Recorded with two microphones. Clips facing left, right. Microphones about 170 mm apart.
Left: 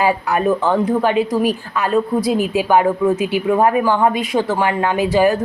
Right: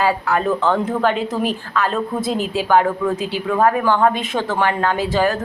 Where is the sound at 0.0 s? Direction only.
15° left (ahead or behind).